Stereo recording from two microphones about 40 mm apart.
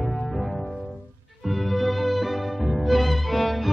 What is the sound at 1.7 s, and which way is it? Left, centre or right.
Music, centre.